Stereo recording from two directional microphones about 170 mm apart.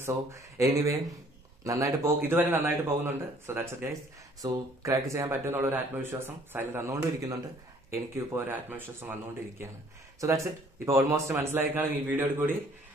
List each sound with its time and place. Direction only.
0.0 s speech: 15° right (ahead or behind)